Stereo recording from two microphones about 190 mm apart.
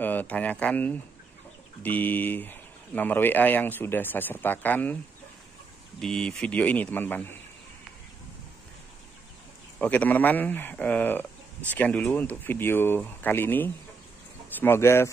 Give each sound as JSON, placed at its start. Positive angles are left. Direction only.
{"t": 0.0, "sound": "speech", "side_deg": 10}
{"t": 5.9, "sound": "speech", "side_deg": 5}
{"t": 9.8, "sound": "speech", "side_deg": 10}